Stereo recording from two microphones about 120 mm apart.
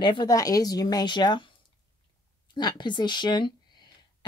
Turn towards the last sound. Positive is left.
turn(degrees=40)  # may be behind; listen again after turning